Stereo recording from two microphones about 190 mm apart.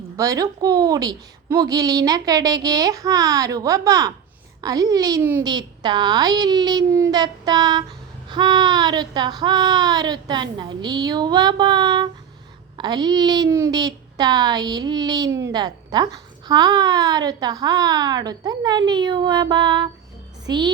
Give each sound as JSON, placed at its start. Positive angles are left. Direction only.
{"t": 0.2, "sound": "a woman's voice", "side_deg": -15}